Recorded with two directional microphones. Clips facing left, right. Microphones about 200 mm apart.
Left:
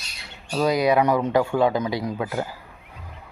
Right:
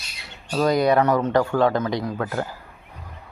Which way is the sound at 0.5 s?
Centre (ahead or behind).